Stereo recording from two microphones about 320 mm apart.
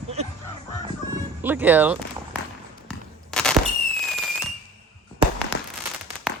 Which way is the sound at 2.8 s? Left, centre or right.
Centre.